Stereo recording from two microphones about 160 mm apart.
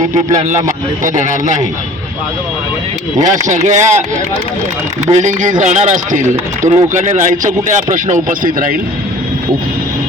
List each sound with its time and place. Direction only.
1.0 s speech: 50° right (ahead or behind)
3.2 s speech: 50° right (ahead or behind)
5.1 s speech: 50° right (ahead or behind)